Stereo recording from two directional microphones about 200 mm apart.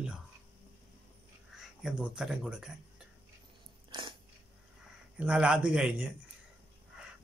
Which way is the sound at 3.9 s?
25° right (ahead or behind).